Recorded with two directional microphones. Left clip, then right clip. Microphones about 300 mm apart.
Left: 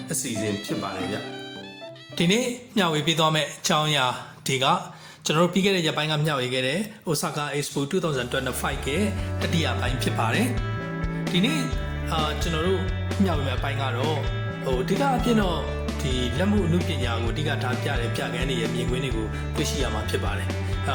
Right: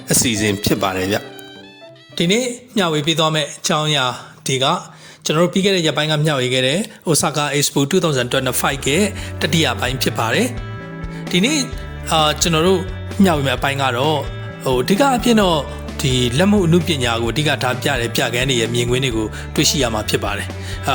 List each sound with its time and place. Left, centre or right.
0.1 s speech: right
2.1 s speech: centre
20.9 s music: right